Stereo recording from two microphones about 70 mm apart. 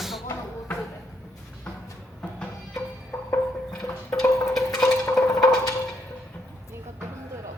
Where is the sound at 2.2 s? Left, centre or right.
Centre.